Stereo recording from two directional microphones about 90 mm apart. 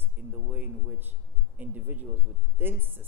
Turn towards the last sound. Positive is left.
turn(degrees=-25)  # may be behind; listen again after turning